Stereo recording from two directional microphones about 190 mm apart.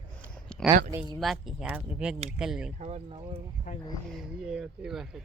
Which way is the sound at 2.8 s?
35° right (ahead or behind).